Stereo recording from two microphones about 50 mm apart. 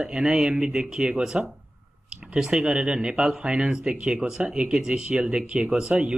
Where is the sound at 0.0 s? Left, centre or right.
Centre.